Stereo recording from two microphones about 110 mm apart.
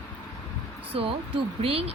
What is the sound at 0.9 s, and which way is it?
Speech, 60° right (ahead or behind).